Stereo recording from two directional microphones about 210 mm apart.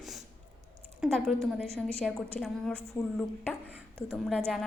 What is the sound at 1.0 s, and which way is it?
A woman's voice, centre (ahead or behind).